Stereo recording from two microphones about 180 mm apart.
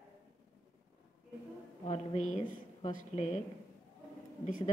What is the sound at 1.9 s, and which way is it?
Speech, 40° left (ahead or behind).